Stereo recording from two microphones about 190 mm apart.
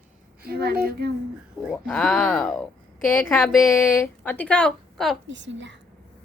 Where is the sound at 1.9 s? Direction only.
Centre (ahead or behind).